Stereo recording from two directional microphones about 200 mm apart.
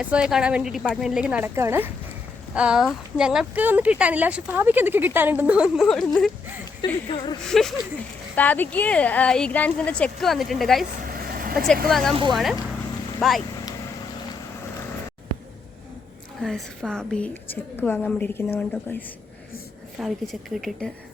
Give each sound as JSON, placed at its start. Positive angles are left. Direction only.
{"t": 0.0, "sound": "speech", "side_deg": -5}
{"t": 6.8, "sound": "a woman's voice", "side_deg": 20}
{"t": 7.4, "sound": "a woman's voice", "side_deg": 0}
{"t": 11.0, "sound": "vehicle", "side_deg": -45}
{"t": 11.5, "sound": "speech", "side_deg": 0}
{"t": 16.4, "sound": "a woman's voice", "side_deg": 0}